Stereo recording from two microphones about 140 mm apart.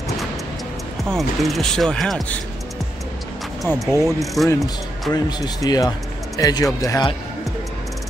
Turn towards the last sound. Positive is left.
turn(degrees=25)  # may be behind; listen again after turning